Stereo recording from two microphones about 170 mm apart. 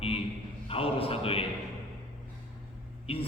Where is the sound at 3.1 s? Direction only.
35° left (ahead or behind).